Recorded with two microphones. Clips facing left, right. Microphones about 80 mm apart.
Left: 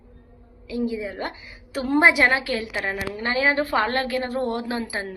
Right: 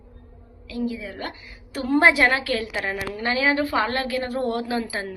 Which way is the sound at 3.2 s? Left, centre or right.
Left.